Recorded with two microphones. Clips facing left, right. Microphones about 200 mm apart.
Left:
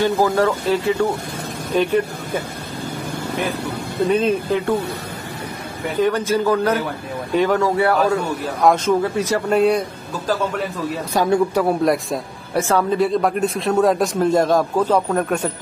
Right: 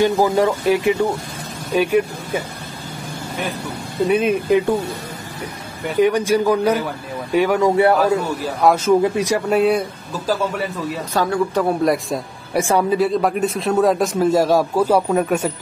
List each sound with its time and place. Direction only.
0.0 s speech: 15° right (ahead or behind)
4.1 s speech: 10° right (ahead or behind)
5.9 s speech: 15° right (ahead or behind)
7.7 s a man's voice: 20° right (ahead or behind)
8.6 s a man's voice: 10° right (ahead or behind)
11.1 s speech: 15° left (ahead or behind)
11.6 s a man's voice: centre (ahead or behind)
12.5 s speech: 15° right (ahead or behind)
13.0 s a man's voice: centre (ahead or behind)